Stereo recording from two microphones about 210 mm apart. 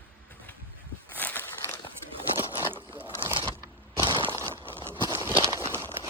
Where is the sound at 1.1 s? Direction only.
10° left (ahead or behind).